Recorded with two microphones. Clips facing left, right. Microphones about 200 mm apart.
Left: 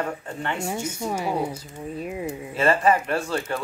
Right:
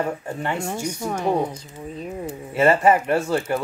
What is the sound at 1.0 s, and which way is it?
Speech, 10° left (ahead or behind).